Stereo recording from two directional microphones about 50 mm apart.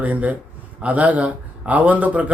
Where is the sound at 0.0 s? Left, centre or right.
Right.